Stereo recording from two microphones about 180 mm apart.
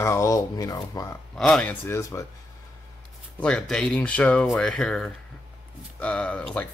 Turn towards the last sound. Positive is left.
turn(degrees=5)  # may be behind; listen again after turning